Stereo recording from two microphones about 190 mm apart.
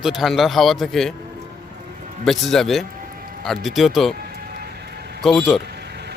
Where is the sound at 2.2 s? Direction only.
Centre (ahead or behind).